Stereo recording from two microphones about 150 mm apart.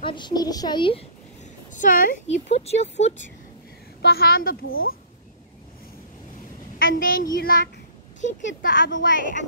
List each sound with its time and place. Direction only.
0.0 s a woman's voice: 30° left (ahead or behind)
1.7 s speech: 60° left (ahead or behind)
4.0 s a woman's voice: 90° left
6.8 s a woman's voice: 70° left (ahead or behind)